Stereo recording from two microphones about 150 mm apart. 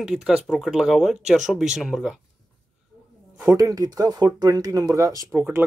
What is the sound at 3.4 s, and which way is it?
Speech, 25° right (ahead or behind).